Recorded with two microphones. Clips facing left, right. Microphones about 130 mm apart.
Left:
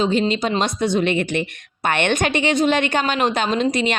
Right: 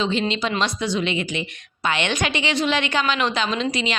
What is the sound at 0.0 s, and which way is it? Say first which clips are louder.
A woman's voice: left 4 dB; 45° left (ahead or behind).